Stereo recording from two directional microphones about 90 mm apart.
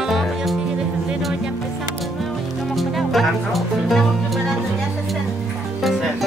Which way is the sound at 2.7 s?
Centre (ahead or behind).